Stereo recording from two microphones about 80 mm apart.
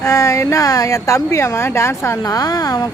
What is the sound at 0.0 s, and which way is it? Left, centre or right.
Speech, left.